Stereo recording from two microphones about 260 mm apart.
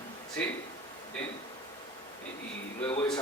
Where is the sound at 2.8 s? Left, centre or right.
Centre.